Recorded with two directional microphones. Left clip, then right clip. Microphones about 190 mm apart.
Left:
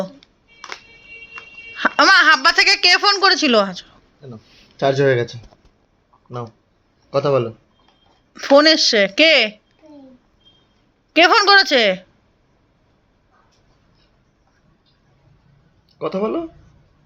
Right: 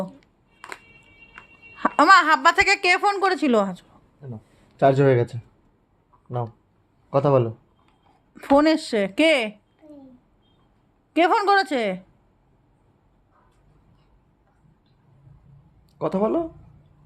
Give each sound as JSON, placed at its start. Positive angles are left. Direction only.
{"t": 1.7, "sound": "a woman's voice", "side_deg": -10}
{"t": 4.8, "sound": "speech", "side_deg": -55}
{"t": 7.2, "sound": "speech", "side_deg": -60}
{"t": 8.3, "sound": "a woman's voice", "side_deg": -10}
{"t": 11.1, "sound": "a woman's voice", "side_deg": -5}
{"t": 16.0, "sound": "speech", "side_deg": -70}